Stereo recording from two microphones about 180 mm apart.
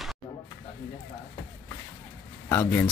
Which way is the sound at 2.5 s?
15° left (ahead or behind).